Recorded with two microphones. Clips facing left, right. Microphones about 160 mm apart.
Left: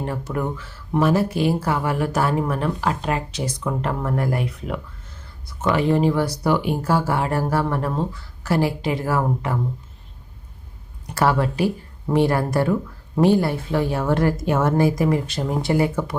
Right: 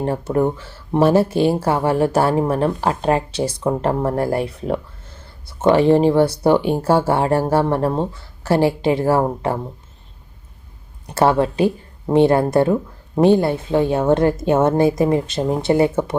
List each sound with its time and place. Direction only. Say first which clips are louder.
0.0 s speech: right 7 dB; 30° right (ahead or behind)
11.0 s speech: right 4 dB; 25° right (ahead or behind)